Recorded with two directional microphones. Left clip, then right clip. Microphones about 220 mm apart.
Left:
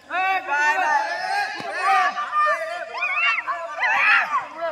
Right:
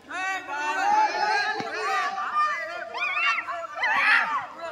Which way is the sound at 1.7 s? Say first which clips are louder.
Left 10 dB; 30° left (ahead or behind).